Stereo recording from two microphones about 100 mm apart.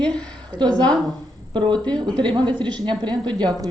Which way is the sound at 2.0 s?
55° right (ahead or behind).